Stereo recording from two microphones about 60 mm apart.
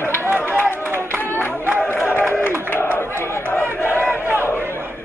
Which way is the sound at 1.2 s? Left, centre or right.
Left.